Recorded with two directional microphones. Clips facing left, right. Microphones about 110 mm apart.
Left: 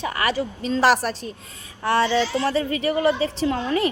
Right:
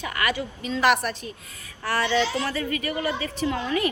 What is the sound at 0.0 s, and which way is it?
A woman's voice, 30° left (ahead or behind).